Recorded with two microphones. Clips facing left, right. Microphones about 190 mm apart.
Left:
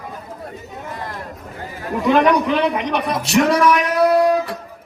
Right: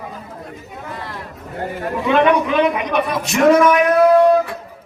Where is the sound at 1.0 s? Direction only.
45° left (ahead or behind).